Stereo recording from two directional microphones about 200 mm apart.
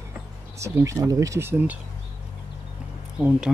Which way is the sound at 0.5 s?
15° right (ahead or behind).